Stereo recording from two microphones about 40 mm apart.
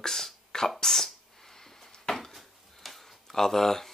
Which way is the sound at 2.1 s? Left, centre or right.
Centre.